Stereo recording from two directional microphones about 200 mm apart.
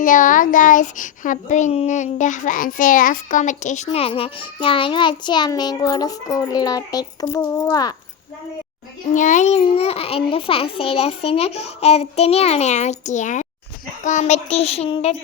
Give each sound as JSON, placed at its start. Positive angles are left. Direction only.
{"t": 0.0, "sound": "a child's voice", "side_deg": 40}
{"t": 9.1, "sound": "a child's voice", "side_deg": 40}